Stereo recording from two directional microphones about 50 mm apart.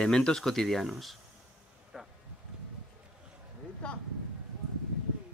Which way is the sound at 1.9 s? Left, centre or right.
Centre.